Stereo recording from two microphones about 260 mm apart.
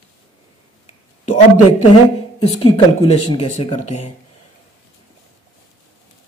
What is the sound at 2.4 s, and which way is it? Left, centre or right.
Speech, left.